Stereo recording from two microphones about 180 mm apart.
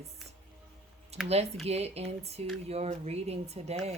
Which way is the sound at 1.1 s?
35° right (ahead or behind).